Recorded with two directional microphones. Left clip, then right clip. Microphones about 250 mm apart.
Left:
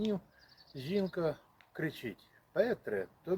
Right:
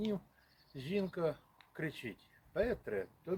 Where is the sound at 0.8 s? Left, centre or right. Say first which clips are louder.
Left 3 dB; centre.